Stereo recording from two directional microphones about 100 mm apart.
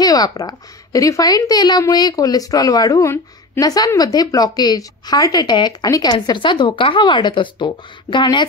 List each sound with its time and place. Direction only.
0.0 s speech: 40° left (ahead or behind)
6.2 s speech: 50° left (ahead or behind)